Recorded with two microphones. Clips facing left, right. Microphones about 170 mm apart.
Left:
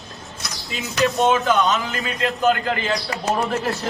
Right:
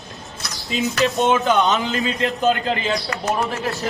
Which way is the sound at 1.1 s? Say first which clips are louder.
Even; 25° right (ahead or behind).